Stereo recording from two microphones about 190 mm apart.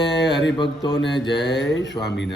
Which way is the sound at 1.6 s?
75° left (ahead or behind).